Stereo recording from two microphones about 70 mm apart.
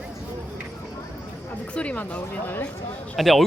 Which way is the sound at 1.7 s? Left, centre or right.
Centre.